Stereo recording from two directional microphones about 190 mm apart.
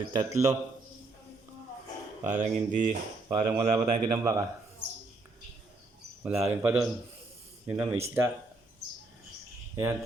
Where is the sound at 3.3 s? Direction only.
20° right (ahead or behind).